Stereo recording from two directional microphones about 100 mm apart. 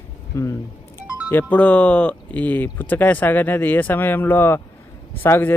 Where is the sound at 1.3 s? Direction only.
15° left (ahead or behind).